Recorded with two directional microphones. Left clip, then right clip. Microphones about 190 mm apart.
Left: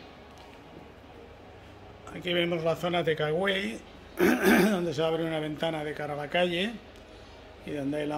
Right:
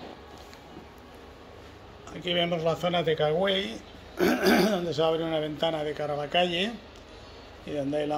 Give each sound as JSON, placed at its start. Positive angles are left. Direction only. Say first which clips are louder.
{"t": 2.0, "sound": "a man's voice", "louder": "right 1 dB", "side_deg": 20}